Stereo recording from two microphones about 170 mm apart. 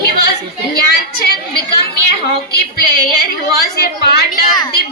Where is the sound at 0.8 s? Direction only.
70° left (ahead or behind).